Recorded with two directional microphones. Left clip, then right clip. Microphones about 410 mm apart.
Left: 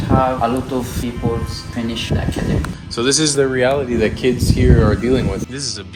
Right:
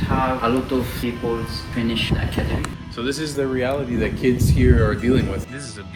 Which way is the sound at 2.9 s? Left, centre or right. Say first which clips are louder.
Left 9 dB; centre.